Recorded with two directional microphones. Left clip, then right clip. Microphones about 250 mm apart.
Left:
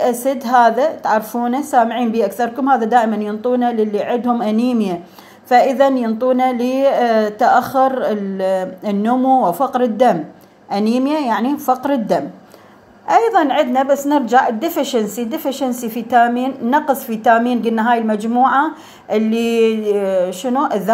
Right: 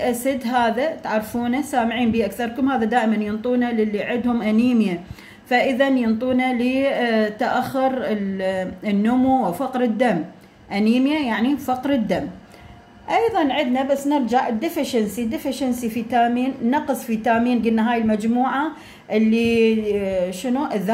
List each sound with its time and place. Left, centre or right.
0.0 s a woman's voice: centre